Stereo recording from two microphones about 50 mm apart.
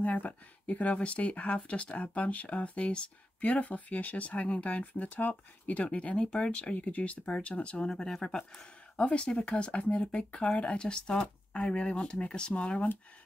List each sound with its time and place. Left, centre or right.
0.0 s speech: left